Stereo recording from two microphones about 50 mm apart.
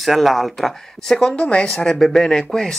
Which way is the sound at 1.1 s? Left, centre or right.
Centre.